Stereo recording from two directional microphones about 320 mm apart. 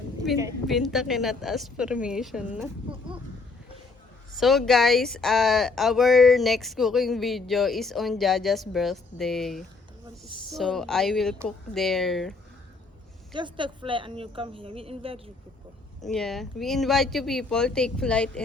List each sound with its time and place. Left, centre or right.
0.3 s speech: centre
4.4 s speech: centre
13.3 s a woman's voice: centre
16.0 s speech: centre